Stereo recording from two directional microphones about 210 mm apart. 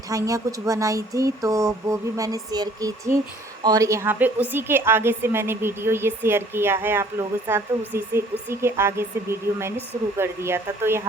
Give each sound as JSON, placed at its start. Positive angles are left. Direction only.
{"t": 0.1, "sound": "a woman's voice", "side_deg": -15}
{"t": 10.2, "sound": "a woman's voice", "side_deg": -10}